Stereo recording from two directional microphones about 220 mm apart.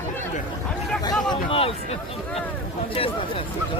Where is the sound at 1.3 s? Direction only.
25° left (ahead or behind).